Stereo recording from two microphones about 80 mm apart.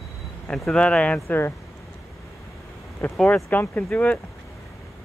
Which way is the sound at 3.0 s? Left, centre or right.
Left.